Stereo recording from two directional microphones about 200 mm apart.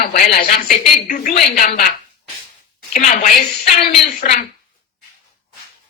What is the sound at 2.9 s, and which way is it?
Speech, 40° left (ahead or behind).